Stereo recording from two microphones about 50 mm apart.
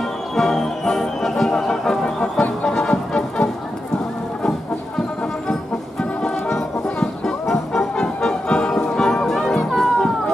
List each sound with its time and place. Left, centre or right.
0.4 s music: centre